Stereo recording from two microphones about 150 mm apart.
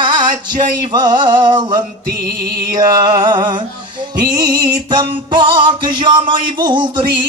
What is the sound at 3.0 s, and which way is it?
Music, 30° right (ahead or behind).